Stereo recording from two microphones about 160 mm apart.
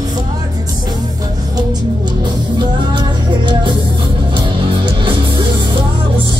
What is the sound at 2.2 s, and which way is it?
Music, 25° right (ahead or behind).